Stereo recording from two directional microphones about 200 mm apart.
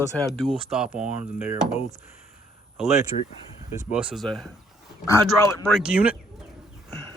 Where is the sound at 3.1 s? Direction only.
40° left (ahead or behind).